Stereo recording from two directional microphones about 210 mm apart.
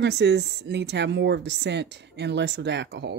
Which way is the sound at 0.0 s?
55° right (ahead or behind).